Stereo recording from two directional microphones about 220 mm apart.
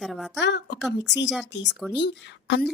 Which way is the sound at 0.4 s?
50° left (ahead or behind).